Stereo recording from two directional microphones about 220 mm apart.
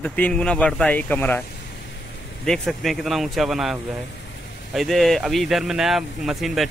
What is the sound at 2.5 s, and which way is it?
Speech, centre (ahead or behind).